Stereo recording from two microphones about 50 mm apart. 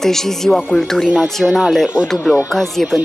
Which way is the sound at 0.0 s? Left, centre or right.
Centre.